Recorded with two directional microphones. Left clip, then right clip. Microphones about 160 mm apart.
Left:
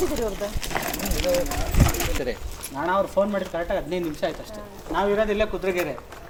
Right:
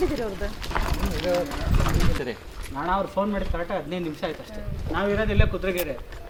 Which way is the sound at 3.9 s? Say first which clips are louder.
Left 3 dB; 20° right (ahead or behind).